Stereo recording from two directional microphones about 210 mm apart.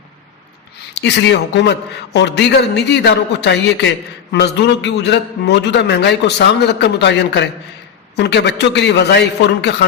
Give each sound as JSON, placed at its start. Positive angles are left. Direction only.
{"t": 0.9, "sound": "a man's voice", "side_deg": 55}